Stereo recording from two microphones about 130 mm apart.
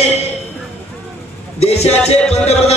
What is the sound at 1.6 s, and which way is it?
A man's voice, 55° left (ahead or behind).